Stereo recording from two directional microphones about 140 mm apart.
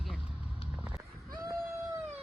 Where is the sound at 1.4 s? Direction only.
20° right (ahead or behind).